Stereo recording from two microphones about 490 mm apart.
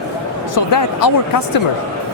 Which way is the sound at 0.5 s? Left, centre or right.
Left.